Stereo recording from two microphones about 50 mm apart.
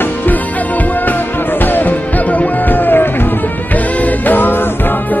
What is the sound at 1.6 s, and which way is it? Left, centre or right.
Music, left.